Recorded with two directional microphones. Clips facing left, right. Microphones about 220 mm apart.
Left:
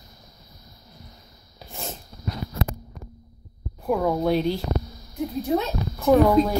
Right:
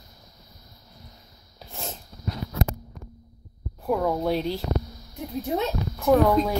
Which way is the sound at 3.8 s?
Centre (ahead or behind).